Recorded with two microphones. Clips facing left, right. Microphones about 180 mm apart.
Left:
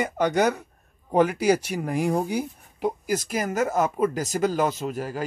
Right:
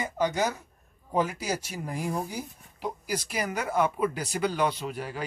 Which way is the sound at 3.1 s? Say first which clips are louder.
Left 5 dB; 45° left (ahead or behind).